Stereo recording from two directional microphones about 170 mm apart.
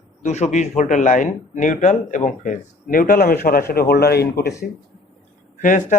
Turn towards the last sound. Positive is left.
turn(degrees=50)  # may be behind; listen again after turning